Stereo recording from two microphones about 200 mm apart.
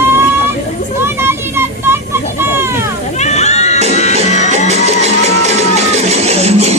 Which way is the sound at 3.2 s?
35° left (ahead or behind).